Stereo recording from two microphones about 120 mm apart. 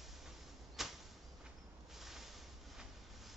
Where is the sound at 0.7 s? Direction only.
Centre (ahead or behind).